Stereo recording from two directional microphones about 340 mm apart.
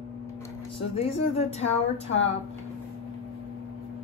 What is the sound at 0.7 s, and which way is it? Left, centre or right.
Speech, centre.